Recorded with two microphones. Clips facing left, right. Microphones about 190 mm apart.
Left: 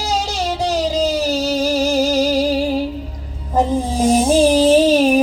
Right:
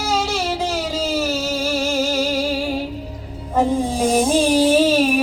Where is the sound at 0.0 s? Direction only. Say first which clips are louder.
Even; 35° left (ahead or behind).